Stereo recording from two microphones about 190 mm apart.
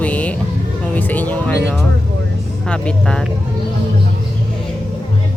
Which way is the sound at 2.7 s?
5° left (ahead or behind).